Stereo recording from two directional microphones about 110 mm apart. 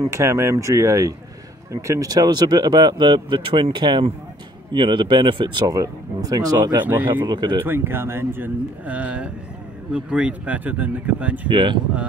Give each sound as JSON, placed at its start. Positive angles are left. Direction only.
{"t": 0.1, "sound": "speech", "side_deg": -25}
{"t": 7.6, "sound": "speech", "side_deg": -20}
{"t": 11.4, "sound": "speech", "side_deg": -45}